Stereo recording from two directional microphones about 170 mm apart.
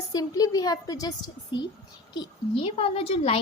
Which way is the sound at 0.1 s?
20° left (ahead or behind).